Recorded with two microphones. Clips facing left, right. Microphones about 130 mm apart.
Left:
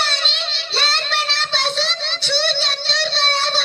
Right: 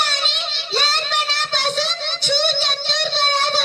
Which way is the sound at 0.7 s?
15° right (ahead or behind).